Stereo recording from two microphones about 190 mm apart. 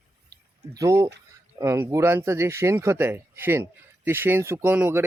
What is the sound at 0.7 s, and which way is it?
Speech, 15° right (ahead or behind).